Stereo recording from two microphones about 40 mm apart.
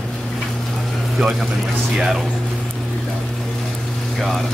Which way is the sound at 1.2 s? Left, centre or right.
Centre.